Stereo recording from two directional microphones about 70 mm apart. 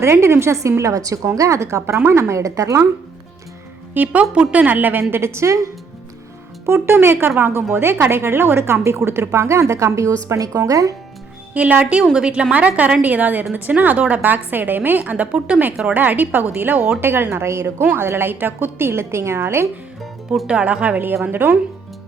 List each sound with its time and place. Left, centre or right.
0.0 s a woman's voice: right
0.8 s a woman's voice: right
3.9 s a woman's voice: right
5.1 s a woman's voice: right
6.7 s a woman's voice: right
11.5 s a woman's voice: centre; by 19.6 s right
20.0 s music: centre
20.5 s a woman's voice: centre